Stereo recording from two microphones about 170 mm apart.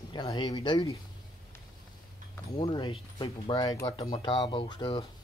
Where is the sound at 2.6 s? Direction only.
25° left (ahead or behind).